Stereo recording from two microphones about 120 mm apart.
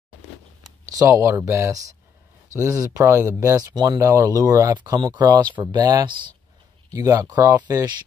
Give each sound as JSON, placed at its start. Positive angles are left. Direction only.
{"t": 0.9, "sound": "speech", "side_deg": -25}